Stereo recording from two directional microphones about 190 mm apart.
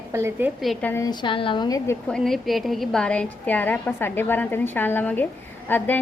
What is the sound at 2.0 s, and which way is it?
A woman's voice, 5° left (ahead or behind).